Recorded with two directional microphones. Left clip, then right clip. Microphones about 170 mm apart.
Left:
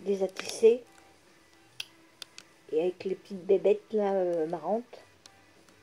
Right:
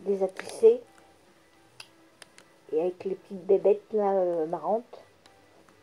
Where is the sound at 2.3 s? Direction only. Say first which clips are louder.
Right 1 dB; centre (ahead or behind).